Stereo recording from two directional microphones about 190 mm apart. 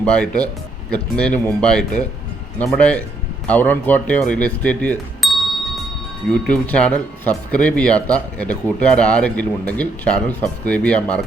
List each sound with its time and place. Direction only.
0.0 s speech: 5° left (ahead or behind)